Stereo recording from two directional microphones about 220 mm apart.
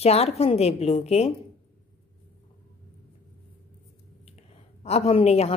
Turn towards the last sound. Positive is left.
turn(degrees=30)  # may be behind; listen again after turning